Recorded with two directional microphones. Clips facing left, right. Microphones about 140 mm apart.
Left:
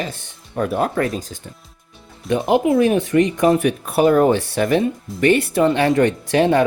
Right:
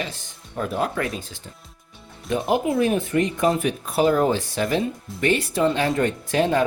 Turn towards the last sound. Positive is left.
turn(degrees=70)  # may be behind; listen again after turning